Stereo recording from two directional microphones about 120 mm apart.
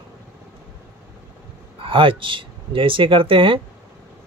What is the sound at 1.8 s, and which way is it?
Speech, 45° right (ahead or behind).